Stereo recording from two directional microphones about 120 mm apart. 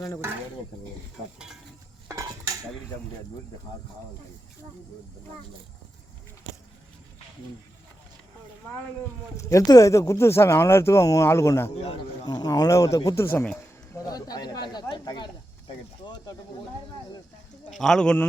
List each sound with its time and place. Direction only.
2.0 s cutlery: 30° right (ahead or behind)
9.4 s speech: 25° left (ahead or behind)
12.2 s speech: 35° left (ahead or behind)
13.2 s speech: 15° left (ahead or behind)
13.9 s speech: 30° left (ahead or behind)
17.7 s a man's voice: 5° left (ahead or behind)